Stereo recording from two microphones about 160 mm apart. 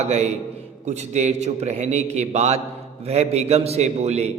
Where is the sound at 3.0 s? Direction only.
40° right (ahead or behind).